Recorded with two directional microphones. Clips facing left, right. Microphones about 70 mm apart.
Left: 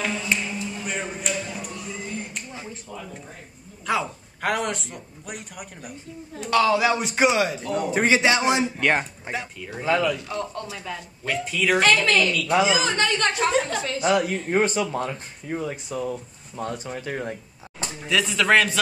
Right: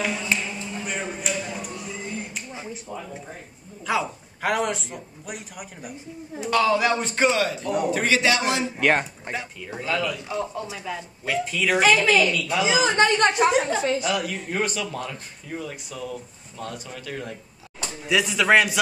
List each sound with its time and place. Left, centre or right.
0.3 s a sound: centre
1.4 s music: centre
2.6 s a sound: centre
3.8 s a man's voice: centre; by 8.6 s left
8.7 s a man's voice: centre
9.8 s speech: left
10.2 s a man's voice: centre
12.6 s a woman's voice: right
14.0 s speech: left
18.0 s speech: centre